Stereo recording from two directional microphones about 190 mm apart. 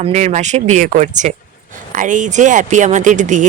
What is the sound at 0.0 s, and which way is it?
Speech, 40° right (ahead or behind).